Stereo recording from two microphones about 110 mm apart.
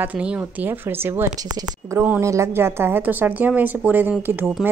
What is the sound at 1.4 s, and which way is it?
Speech, 35° right (ahead or behind).